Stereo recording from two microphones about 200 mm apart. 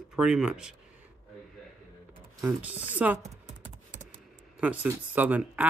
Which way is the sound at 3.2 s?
35° right (ahead or behind).